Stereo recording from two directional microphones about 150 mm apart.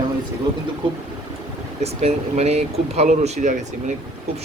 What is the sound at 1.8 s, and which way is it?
Speech, 45° right (ahead or behind).